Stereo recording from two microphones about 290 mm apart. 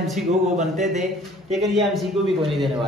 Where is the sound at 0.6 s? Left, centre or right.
Right.